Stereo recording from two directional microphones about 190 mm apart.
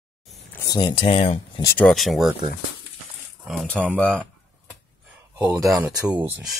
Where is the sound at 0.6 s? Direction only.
20° left (ahead or behind).